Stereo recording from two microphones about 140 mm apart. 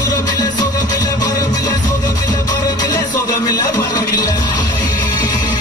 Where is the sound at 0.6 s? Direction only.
30° left (ahead or behind).